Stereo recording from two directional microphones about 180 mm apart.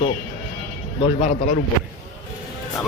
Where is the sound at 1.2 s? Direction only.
50° left (ahead or behind).